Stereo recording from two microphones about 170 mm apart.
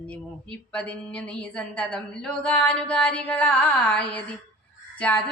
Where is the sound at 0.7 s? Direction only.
5° left (ahead or behind).